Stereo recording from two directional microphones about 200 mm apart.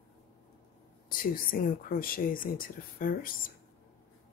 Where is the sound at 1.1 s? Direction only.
45° left (ahead or behind).